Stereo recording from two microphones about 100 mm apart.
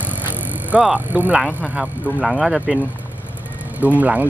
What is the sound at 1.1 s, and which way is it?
Speech, 15° right (ahead or behind).